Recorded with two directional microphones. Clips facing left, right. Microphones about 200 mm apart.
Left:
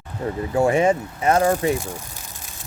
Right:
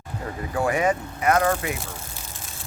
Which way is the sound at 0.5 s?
25° left (ahead or behind).